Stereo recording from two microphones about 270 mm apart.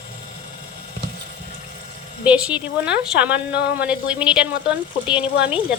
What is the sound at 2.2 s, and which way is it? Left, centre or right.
A woman's voice, centre.